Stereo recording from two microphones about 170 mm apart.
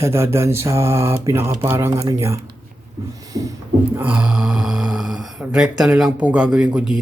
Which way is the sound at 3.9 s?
10° right (ahead or behind).